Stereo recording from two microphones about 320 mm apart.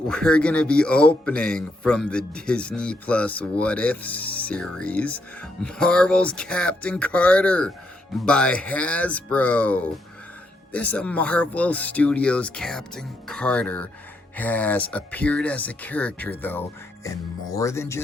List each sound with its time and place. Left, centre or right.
0.1 s a man's voice: centre